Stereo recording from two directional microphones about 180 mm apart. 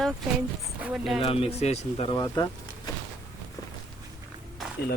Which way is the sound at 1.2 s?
30° left (ahead or behind).